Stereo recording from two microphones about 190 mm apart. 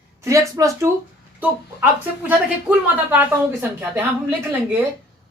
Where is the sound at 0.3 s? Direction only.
15° right (ahead or behind).